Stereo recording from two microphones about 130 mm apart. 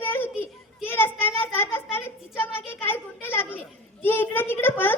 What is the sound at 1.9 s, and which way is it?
Children playing, 20° left (ahead or behind).